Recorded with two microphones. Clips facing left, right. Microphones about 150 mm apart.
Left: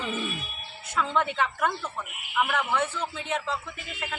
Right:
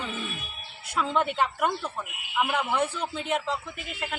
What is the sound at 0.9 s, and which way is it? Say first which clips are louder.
A man's voice: right 1 dB; 10° right (ahead or behind).